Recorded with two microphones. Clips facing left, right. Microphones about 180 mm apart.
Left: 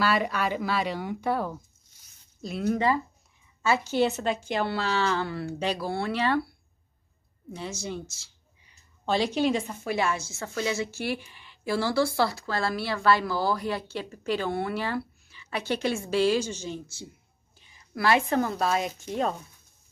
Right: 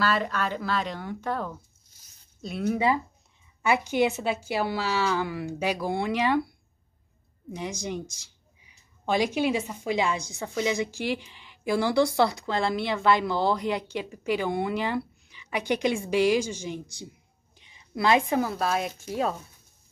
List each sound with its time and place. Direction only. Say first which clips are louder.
0.0 s speech: left 1 dB; 10° left (ahead or behind)
3.6 s speech: right 1 dB; 15° right (ahead or behind)
7.5 s a woman's voice: right 2 dB; 15° right (ahead or behind)